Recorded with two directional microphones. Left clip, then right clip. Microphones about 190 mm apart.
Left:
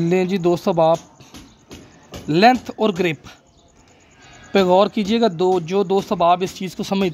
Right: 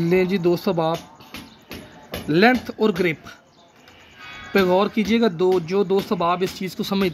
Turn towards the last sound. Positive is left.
turn(degrees=45)  # may be behind; listen again after turning